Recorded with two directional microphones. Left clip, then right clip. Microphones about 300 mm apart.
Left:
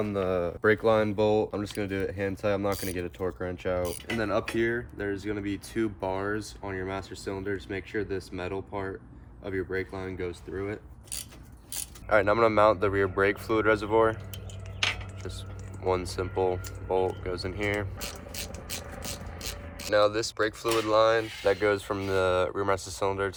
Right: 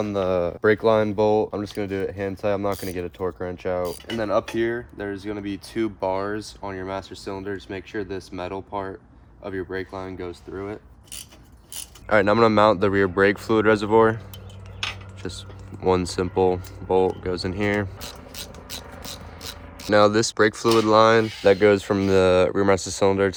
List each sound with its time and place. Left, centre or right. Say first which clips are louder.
0.0 s speech: right 6 dB; centre
12.0 s speech: right 5 dB; right
15.2 s speech: right 6 dB; right
19.0 s a sound: right 2 dB; centre
19.9 s speech: right 7 dB; right